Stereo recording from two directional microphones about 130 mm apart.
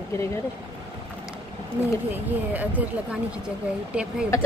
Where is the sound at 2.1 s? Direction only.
10° right (ahead or behind).